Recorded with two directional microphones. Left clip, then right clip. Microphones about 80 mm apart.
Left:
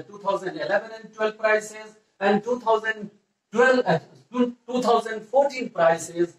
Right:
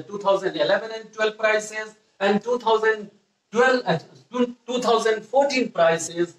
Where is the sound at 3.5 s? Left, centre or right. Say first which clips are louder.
Even; right.